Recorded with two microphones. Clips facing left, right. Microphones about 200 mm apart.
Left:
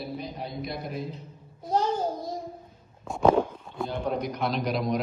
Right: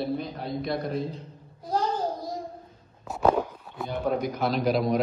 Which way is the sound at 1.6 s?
25° left (ahead or behind).